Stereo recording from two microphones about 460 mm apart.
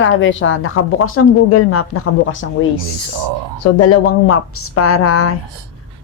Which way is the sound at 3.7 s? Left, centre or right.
Left.